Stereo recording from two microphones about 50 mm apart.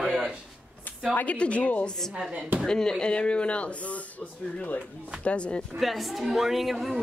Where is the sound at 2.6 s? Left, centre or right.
Centre.